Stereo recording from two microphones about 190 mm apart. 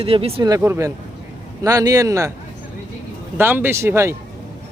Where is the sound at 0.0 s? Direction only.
30° right (ahead or behind).